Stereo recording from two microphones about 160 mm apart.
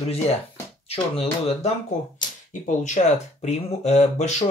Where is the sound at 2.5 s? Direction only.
50° left (ahead or behind).